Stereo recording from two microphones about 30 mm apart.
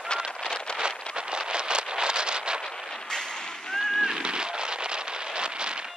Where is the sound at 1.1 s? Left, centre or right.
Right.